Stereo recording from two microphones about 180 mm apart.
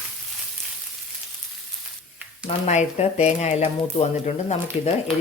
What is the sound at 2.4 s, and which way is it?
Speech, 40° left (ahead or behind).